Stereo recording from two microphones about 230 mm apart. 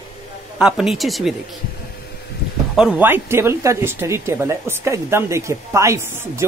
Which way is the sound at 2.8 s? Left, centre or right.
Centre.